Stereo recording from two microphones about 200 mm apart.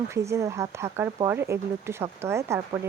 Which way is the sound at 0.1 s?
15° right (ahead or behind).